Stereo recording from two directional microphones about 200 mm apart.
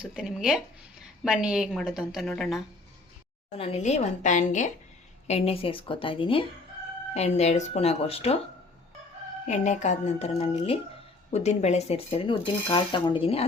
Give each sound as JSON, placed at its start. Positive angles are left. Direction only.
{"t": 0.0, "sound": "a woman's voice", "side_deg": -5}
{"t": 3.6, "sound": "speech", "side_deg": 35}
{"t": 9.5, "sound": "speech", "side_deg": 35}